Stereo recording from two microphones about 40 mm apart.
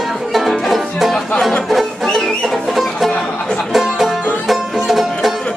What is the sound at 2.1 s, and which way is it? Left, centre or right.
Music, centre.